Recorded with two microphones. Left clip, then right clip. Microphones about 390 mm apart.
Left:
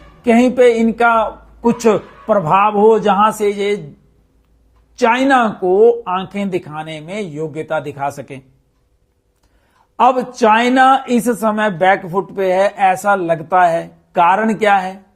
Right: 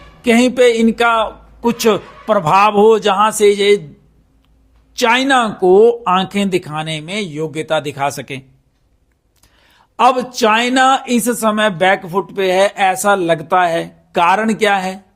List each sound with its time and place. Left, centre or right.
0.2 s speech: right
4.9 s speech: right
10.0 s speech: right